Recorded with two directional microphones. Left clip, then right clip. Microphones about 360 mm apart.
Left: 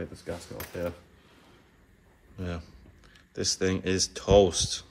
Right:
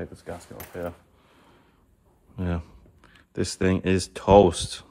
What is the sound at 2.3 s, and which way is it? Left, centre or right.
Speech, centre.